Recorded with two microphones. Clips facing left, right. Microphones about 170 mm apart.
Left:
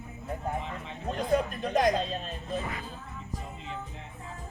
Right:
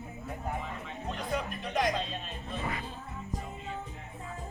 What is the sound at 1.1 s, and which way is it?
Speech, 40° left (ahead or behind).